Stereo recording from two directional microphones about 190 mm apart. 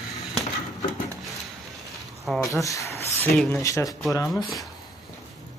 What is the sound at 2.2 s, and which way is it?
Speech, centre (ahead or behind).